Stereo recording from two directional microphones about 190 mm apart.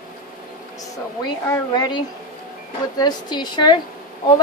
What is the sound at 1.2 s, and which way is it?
Speech, 20° left (ahead or behind).